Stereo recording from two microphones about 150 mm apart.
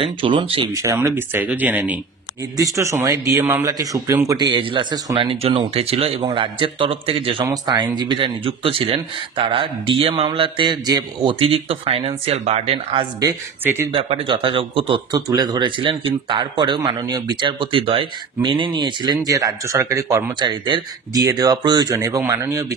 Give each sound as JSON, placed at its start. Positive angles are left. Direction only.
{"t": 0.0, "sound": "speech", "side_deg": -35}
{"t": 0.7, "sound": "speech", "side_deg": -20}
{"t": 2.5, "sound": "speech", "side_deg": -20}
{"t": 11.3, "sound": "speech", "side_deg": -35}
{"t": 13.2, "sound": "speech", "side_deg": -20}
{"t": 13.9, "sound": "speech", "side_deg": -35}